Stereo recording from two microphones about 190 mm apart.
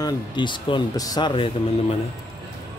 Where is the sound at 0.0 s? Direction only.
25° left (ahead or behind).